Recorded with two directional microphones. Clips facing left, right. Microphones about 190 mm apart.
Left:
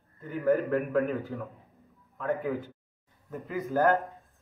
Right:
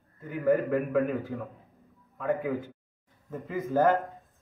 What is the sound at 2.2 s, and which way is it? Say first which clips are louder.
Speech: right 1 dB; 15° right (ahead or behind).